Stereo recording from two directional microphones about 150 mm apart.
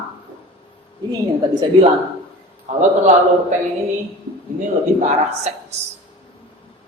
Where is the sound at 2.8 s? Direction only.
50° right (ahead or behind).